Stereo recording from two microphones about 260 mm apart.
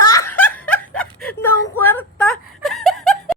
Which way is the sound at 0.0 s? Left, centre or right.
Left.